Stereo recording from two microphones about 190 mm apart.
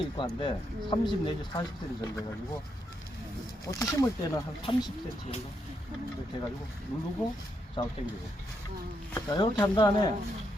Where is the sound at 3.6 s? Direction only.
15° left (ahead or behind).